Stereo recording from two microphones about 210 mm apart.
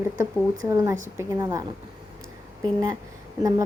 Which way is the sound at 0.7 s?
15° right (ahead or behind).